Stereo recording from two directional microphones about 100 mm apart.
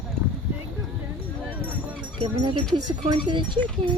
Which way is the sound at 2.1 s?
55° right (ahead or behind).